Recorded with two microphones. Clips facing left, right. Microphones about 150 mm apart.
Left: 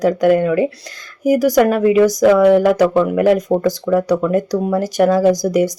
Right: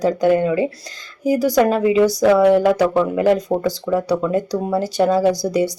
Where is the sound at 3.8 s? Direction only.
10° right (ahead or behind).